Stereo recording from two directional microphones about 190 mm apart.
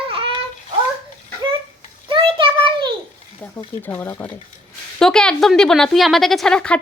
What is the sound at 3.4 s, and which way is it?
A woman's voice, 10° left (ahead or behind).